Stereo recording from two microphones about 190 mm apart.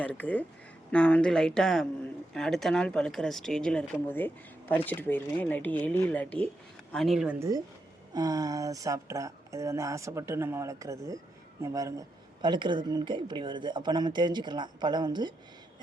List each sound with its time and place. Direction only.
0.0 s speech: 5° left (ahead or behind)
7.3 s a woman's voice: 15° right (ahead or behind)